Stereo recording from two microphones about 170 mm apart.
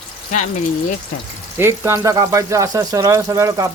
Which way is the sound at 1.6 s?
15° right (ahead or behind).